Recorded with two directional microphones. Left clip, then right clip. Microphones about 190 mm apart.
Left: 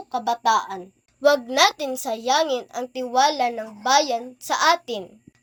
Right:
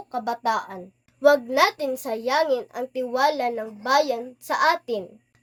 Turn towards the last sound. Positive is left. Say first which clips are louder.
# left 1 dB
turn(degrees=-10)  # may be behind; listen again after turning